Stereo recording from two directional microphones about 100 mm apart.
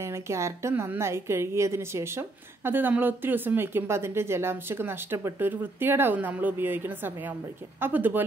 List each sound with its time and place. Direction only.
0.0 s a woman's voice: 30° right (ahead or behind)